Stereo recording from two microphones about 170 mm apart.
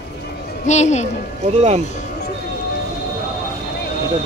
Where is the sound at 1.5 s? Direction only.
40° right (ahead or behind).